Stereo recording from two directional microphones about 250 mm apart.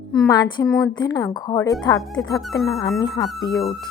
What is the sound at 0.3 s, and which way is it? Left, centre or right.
Speech, centre.